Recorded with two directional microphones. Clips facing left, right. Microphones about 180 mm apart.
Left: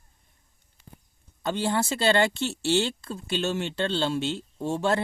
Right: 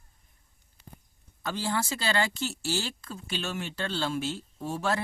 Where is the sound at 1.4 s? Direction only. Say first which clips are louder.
Left 5 dB; 25° left (ahead or behind).